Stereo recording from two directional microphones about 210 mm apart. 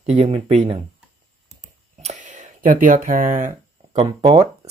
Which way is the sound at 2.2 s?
35° right (ahead or behind).